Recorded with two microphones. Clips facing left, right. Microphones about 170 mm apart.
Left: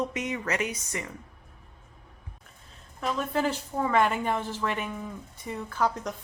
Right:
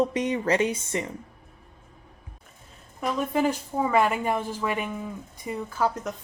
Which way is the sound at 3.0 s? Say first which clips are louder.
Right 3 dB; 15° right (ahead or behind).